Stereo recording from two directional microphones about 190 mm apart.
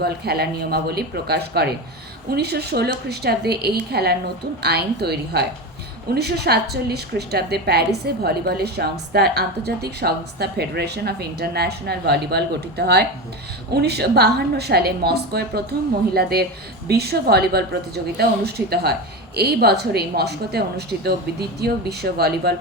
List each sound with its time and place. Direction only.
0.0 s a woman's voice: 55° right (ahead or behind)